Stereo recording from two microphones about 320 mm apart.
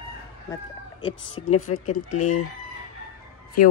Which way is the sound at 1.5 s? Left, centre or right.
Left.